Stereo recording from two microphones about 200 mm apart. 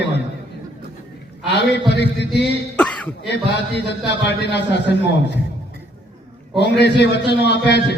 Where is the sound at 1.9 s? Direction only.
60° left (ahead or behind).